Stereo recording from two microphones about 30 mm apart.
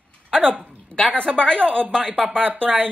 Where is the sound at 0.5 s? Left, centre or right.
Right.